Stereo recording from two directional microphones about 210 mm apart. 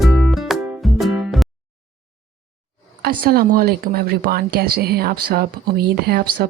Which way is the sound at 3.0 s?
45° right (ahead or behind).